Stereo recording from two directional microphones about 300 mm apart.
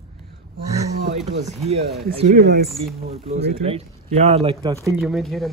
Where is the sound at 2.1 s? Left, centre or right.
Right.